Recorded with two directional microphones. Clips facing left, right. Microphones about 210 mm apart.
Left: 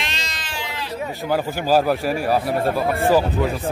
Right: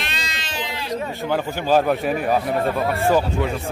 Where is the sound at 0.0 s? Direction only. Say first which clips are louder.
Even; 60° right (ahead or behind).